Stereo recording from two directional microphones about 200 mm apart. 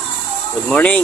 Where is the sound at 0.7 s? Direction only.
5° left (ahead or behind).